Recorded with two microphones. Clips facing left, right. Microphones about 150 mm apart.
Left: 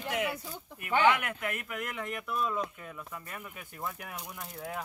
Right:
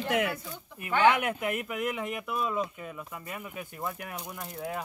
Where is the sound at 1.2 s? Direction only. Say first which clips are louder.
Right 6 dB; 20° right (ahead or behind).